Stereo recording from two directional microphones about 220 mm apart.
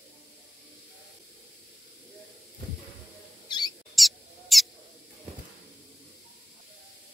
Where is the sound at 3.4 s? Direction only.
20° left (ahead or behind).